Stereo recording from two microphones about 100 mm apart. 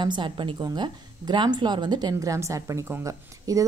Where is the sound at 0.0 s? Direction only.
50° right (ahead or behind).